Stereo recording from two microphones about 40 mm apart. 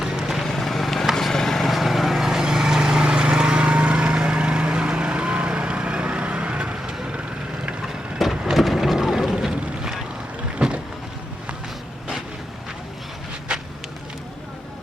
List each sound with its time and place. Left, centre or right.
0.0 s vehicle: centre
0.4 s vehicle: centre; by 7.2 s right
8.2 s wood: centre
8.5 s vehicle: centre; by 10.8 s right
13.5 s a sound: right